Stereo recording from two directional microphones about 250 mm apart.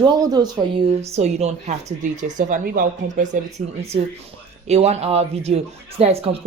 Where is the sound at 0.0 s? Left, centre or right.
Centre; by 3.2 s right.